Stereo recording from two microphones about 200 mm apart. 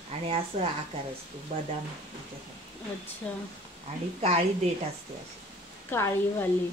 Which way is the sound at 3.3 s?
5° left (ahead or behind).